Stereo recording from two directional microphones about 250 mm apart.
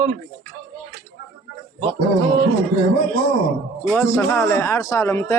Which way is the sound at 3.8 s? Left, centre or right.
Centre.